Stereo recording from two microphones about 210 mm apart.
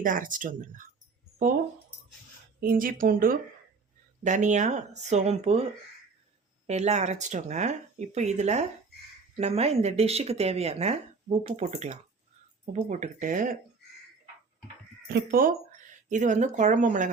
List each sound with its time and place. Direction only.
0.0 s speech: 40° right (ahead or behind)
2.6 s speech: 45° right (ahead or behind)
6.7 s speech: 30° right (ahead or behind)
15.1 s speech: 45° right (ahead or behind)